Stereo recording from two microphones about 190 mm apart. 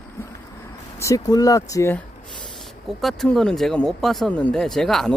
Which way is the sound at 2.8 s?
Centre (ahead or behind).